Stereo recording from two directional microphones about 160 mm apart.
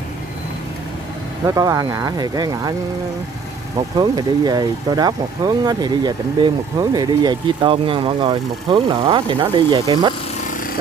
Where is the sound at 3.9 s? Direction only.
25° right (ahead or behind).